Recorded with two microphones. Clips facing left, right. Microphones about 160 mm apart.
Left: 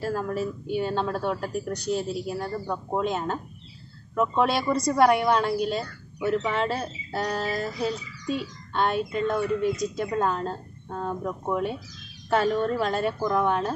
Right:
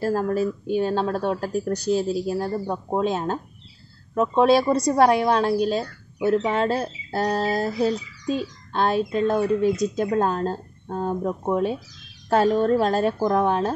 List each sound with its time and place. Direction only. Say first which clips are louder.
0.0 s speech: right 5 dB; 40° right (ahead or behind)